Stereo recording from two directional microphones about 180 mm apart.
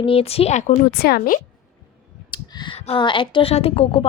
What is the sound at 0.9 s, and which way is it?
Speech, 60° left (ahead or behind).